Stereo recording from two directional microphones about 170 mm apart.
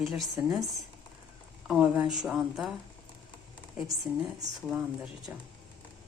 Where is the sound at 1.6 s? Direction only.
5° right (ahead or behind).